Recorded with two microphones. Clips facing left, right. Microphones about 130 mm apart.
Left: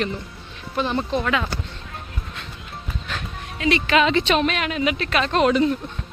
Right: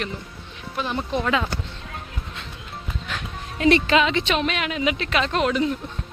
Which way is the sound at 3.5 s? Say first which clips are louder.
Right 4 dB; 45° right (ahead or behind).